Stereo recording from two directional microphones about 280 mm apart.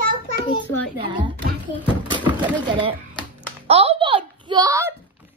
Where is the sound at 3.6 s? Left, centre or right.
Right.